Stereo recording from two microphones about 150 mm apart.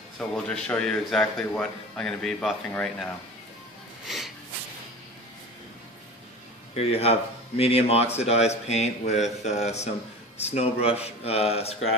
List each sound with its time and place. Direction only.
0.2 s a man's voice: 5° left (ahead or behind)
6.7 s speech: 45° left (ahead or behind)